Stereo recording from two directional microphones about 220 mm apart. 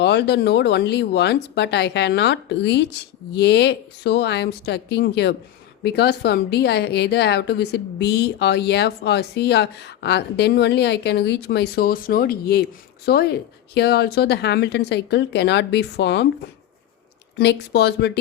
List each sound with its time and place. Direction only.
0.0 s a woman's voice: 50° left (ahead or behind)
17.3 s a woman's voice: 50° left (ahead or behind)